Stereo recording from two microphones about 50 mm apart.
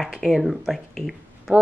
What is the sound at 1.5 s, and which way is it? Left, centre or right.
Speech, right.